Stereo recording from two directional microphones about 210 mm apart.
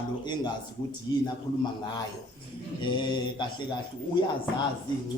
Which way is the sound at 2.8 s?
20° left (ahead or behind).